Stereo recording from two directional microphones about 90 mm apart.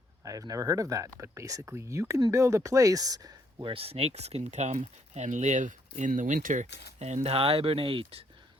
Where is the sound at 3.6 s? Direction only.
90° right.